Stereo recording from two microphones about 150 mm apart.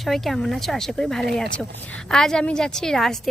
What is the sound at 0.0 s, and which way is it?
A woman's voice, centre (ahead or behind).